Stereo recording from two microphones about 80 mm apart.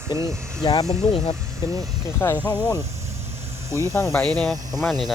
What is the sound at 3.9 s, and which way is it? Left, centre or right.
Speech, left.